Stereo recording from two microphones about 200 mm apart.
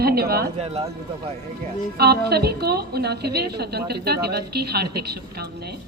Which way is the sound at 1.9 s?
55° right (ahead or behind).